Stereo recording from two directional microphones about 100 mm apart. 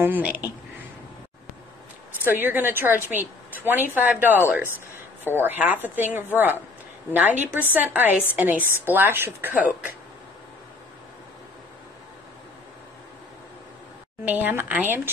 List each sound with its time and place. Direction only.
0.0 s a woman's voice: 15° right (ahead or behind)
2.4 s a woman's voice: 20° right (ahead or behind)
14.2 s a woman's voice: 15° right (ahead or behind)